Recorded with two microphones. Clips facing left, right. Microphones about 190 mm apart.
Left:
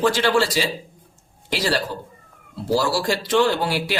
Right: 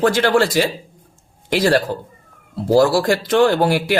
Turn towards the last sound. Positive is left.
turn(degrees=-50)  # may be behind; listen again after turning